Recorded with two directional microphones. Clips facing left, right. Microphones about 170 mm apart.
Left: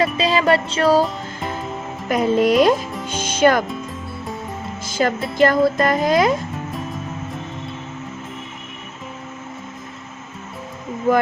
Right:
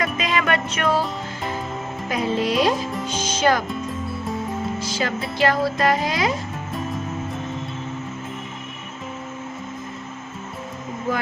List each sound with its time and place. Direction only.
0.0 s music: 30° left (ahead or behind)
2.0 s music: 50° left (ahead or behind)
3.7 s music: centre (ahead or behind)
4.8 s music: 50° left (ahead or behind)